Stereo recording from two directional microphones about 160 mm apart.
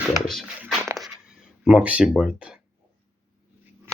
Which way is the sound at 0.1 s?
Centre (ahead or behind).